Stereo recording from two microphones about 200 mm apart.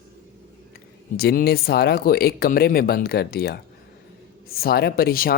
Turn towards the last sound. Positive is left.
turn(degrees=50)  # may be behind; listen again after turning